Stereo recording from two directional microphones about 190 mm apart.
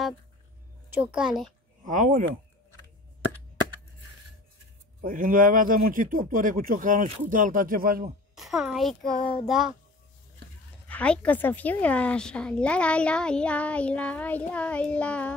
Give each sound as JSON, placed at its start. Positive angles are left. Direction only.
{"t": 0.8, "sound": "a child's voice", "side_deg": -10}
{"t": 1.9, "sound": "speech", "side_deg": -40}
{"t": 5.0, "sound": "speech", "side_deg": -45}
{"t": 8.4, "sound": "a child's voice", "side_deg": 0}
{"t": 10.9, "sound": "a woman's voice", "side_deg": 5}